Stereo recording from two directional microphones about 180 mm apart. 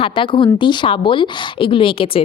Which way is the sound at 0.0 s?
30° left (ahead or behind).